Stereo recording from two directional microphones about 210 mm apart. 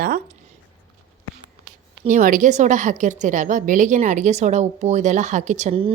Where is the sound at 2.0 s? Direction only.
35° right (ahead or behind).